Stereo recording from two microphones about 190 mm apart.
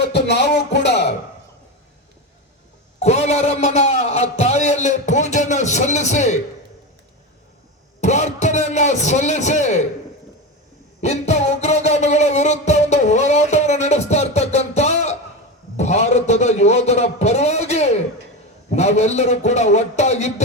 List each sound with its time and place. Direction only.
0.0 s music: 60° left (ahead or behind)
3.0 s a man's voice: 35° left (ahead or behind)
8.0 s a man's voice: 35° left (ahead or behind)
11.0 s music: 35° left (ahead or behind)
15.8 s a man's voice: 35° left (ahead or behind)